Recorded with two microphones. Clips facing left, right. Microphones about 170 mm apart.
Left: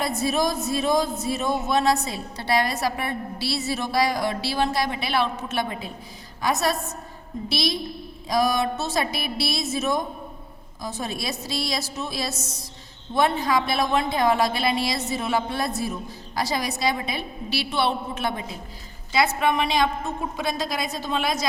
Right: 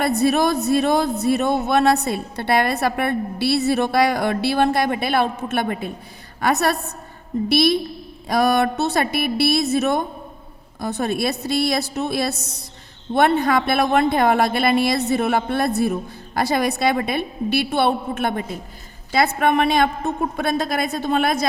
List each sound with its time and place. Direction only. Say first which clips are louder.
0.0 s speech: right 6 dB; 65° right (ahead or behind)